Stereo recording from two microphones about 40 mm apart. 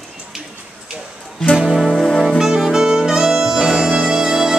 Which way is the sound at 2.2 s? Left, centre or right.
Centre.